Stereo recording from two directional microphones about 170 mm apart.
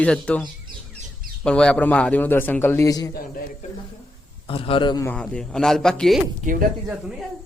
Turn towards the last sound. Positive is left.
turn(degrees=-5)  # may be behind; listen again after turning